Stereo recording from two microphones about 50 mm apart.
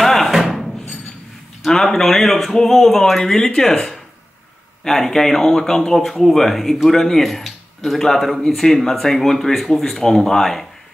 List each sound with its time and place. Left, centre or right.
0.0 s music: centre
1.6 s speech: centre